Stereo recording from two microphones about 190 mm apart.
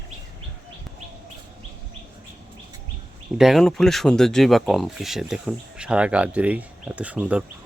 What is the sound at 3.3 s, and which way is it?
Speech, centre (ahead or behind).